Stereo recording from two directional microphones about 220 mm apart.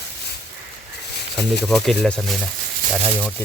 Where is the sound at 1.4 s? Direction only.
Centre (ahead or behind).